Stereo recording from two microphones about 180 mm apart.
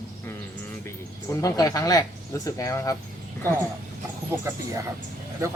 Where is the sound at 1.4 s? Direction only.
20° left (ahead or behind).